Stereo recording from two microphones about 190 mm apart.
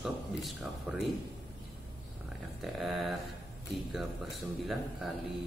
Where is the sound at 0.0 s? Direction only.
Centre (ahead or behind).